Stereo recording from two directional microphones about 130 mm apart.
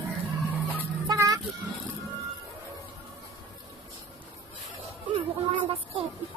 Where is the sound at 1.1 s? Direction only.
25° right (ahead or behind).